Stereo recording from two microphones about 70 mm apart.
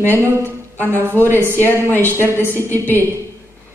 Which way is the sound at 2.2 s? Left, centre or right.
Right.